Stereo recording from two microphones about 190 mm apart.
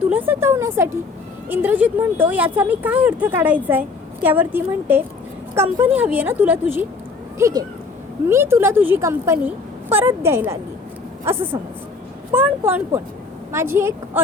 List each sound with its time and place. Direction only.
0.1 s a woman's voice: 10° right (ahead or behind)